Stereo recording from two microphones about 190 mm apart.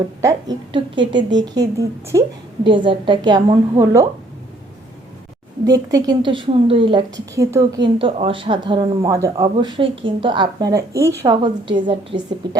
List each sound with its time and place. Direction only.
0.2 s a woman's voice: 20° right (ahead or behind)
5.6 s a woman's voice: 20° right (ahead or behind)